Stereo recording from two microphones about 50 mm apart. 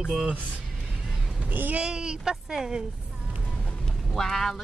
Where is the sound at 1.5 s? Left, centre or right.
Right.